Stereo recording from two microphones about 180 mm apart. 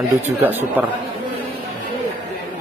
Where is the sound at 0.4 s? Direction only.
10° right (ahead or behind).